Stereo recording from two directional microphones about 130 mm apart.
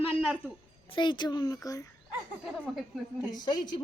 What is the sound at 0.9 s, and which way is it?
Speech, 35° left (ahead or behind).